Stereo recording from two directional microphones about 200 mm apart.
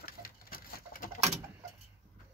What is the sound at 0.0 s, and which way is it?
Bird, 45° left (ahead or behind).